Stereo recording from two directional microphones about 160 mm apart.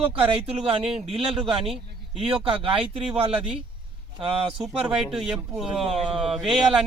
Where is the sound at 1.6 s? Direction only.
5° right (ahead or behind).